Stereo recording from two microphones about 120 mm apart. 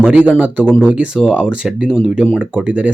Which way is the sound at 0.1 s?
15° right (ahead or behind).